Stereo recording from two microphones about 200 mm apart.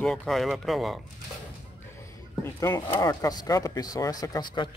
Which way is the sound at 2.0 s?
15° left (ahead or behind).